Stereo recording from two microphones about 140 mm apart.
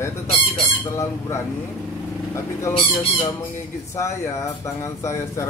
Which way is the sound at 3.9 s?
20° left (ahead or behind).